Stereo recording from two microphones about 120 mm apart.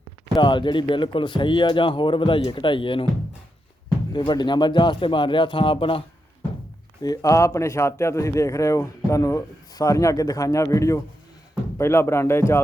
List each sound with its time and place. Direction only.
0.3 s speech: 40° left (ahead or behind)
4.1 s speech: 40° left (ahead or behind)
7.0 s speech: 30° left (ahead or behind)